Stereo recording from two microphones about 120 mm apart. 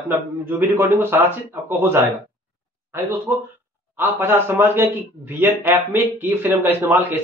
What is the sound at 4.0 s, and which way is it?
A man's voice, 15° right (ahead or behind).